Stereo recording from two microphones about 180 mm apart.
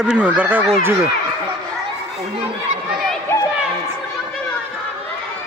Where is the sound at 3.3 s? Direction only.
15° left (ahead or behind).